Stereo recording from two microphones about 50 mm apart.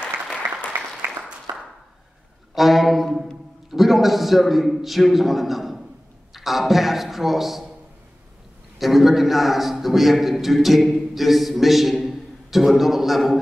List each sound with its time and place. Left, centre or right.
1.0 s applause: centre
2.5 s brass instrument: centre
3.7 s a man's voice: centre
8.7 s a man's voice: centre